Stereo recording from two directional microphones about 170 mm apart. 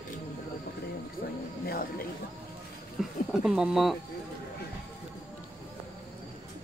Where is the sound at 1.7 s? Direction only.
60° left (ahead or behind).